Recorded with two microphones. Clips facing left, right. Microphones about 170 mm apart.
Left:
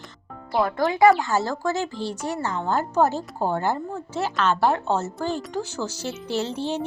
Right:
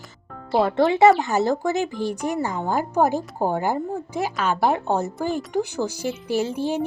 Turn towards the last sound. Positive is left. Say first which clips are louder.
# right 3 dB
turn(degrees=-10)  # may be behind; listen again after turning